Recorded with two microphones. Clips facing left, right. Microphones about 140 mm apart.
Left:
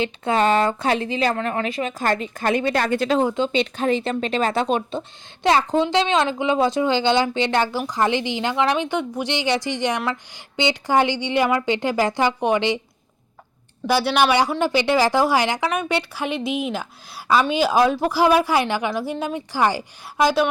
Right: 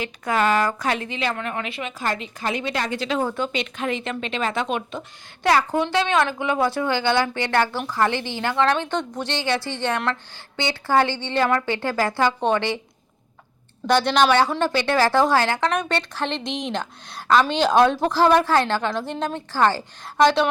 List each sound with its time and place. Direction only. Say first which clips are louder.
0.0 s a woman's voice: left 3 dB; 25° left (ahead or behind); by 3.2 s 50° left (ahead or behind)
3.2 s a woman's voice: left 4 dB; 20° left (ahead or behind)
13.8 s speech: even; 5° left (ahead or behind)